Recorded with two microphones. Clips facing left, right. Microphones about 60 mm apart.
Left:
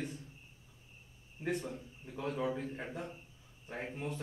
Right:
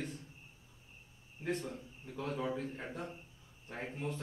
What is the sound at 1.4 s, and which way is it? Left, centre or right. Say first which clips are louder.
A man's voice: left 1 dB; centre.